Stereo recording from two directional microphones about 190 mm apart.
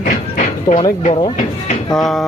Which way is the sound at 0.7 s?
20° left (ahead or behind).